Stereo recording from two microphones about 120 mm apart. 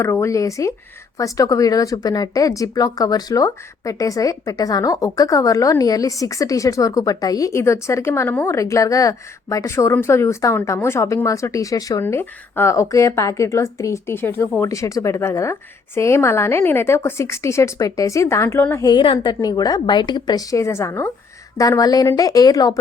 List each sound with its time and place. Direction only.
0.0 s speech: 25° left (ahead or behind)
12.0 s speech: 15° left (ahead or behind)
18.9 s a woman's voice: 45° left (ahead or behind)